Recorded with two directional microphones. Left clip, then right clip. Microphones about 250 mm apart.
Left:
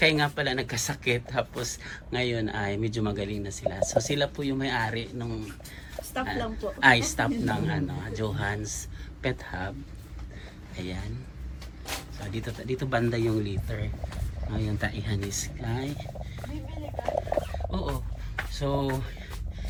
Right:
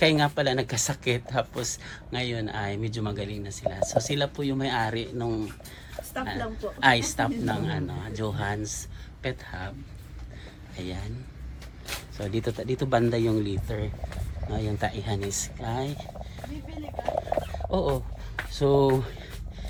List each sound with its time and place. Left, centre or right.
0.0 s speech: centre
10.8 s speech: centre
12.1 s speech: centre
17.1 s a sound: left
18.5 s speech: centre